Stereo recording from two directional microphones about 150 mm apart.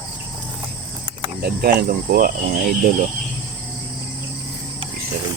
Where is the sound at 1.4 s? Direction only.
90° right.